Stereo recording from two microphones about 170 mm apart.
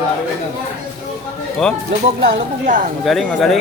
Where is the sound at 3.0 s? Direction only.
Centre (ahead or behind).